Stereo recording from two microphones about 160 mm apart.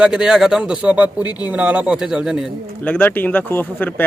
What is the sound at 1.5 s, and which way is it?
Speech, 10° right (ahead or behind).